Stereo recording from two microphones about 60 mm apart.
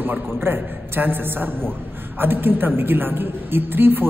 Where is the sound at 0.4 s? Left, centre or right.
Right.